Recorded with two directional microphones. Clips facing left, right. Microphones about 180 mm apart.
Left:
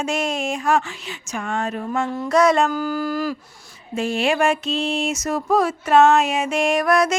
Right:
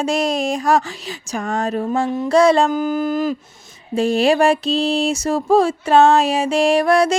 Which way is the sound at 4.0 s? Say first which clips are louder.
Right 5 dB; 35° right (ahead or behind).